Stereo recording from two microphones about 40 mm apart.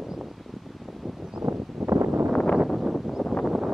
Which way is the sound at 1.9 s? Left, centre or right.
Right.